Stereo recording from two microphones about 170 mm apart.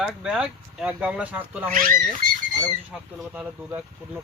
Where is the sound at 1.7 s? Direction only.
55° right (ahead or behind).